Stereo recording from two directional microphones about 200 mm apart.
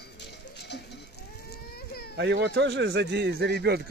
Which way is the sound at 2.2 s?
60° right (ahead or behind).